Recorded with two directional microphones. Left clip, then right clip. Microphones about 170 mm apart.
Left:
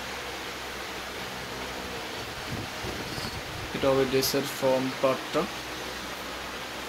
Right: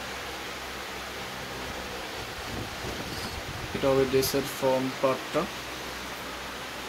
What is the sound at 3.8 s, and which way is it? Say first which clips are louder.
Speech: even; centre (ahead or behind).